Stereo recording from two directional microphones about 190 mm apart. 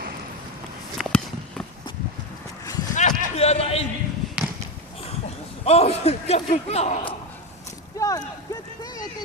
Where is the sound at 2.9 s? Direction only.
40° left (ahead or behind).